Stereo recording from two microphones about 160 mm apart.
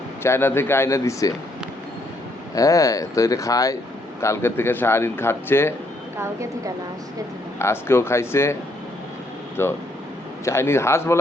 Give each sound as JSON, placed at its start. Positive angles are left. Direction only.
{"t": 0.2, "sound": "a man's voice", "side_deg": 15}
{"t": 2.6, "sound": "a man's voice", "side_deg": 20}
{"t": 6.1, "sound": "speech", "side_deg": -15}
{"t": 7.6, "sound": "a man's voice", "side_deg": 15}
{"t": 9.6, "sound": "a man's voice", "side_deg": 15}